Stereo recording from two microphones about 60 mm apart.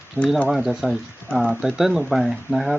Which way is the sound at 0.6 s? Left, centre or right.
Centre.